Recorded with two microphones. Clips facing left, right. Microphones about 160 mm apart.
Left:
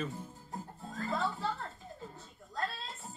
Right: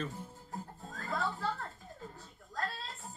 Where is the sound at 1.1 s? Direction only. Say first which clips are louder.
Left 1 dB; 20° left (ahead or behind).